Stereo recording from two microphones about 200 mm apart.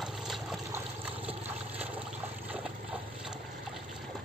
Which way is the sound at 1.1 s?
30° right (ahead or behind).